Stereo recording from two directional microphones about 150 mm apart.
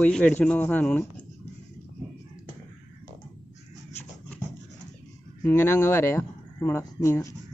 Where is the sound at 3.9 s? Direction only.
10° left (ahead or behind).